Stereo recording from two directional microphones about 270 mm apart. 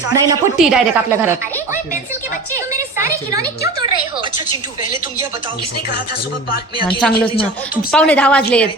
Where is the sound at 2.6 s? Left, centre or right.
Centre.